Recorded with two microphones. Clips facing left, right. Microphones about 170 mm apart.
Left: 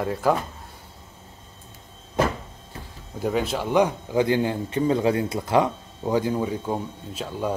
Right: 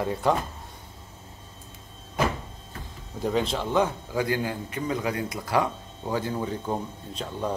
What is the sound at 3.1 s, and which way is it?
A man's voice, 5° left (ahead or behind).